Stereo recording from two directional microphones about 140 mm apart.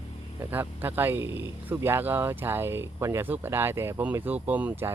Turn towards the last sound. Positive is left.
turn(degrees=-15)  # may be behind; listen again after turning